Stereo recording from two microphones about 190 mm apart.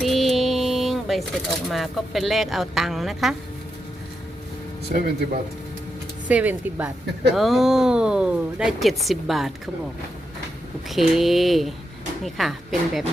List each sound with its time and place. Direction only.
0.0 s a sound: centre (ahead or behind)
1.6 s speech: centre (ahead or behind)
4.9 s speech: 50° right (ahead or behind)
6.2 s speech: 10° right (ahead or behind)
10.8 s speech: centre (ahead or behind)